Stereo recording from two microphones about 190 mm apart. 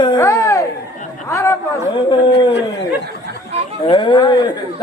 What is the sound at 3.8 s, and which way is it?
Speech, 25° left (ahead or behind).